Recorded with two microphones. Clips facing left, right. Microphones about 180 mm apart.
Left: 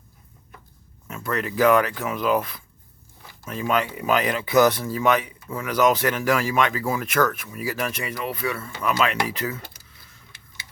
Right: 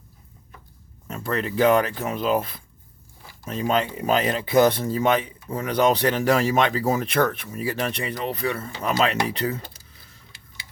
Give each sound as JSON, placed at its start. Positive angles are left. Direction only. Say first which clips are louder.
{"t": 1.0, "sound": "speech", "louder": "right 1 dB", "side_deg": -35}